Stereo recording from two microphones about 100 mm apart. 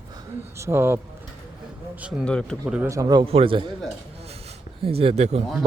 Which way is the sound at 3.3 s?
70° right (ahead or behind).